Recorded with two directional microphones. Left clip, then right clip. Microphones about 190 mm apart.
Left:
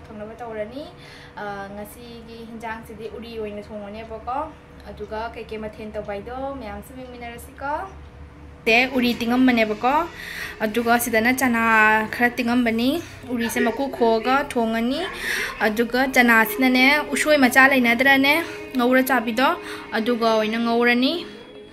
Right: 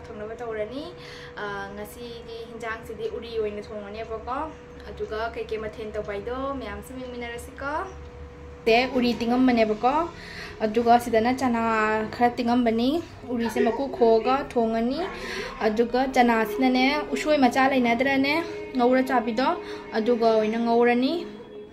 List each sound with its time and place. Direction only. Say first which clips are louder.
1.4 s speech: left 2 dB; centre (ahead or behind)
5.1 s speech: even; 5° right (ahead or behind)
7.2 s speech: left 1 dB; centre (ahead or behind)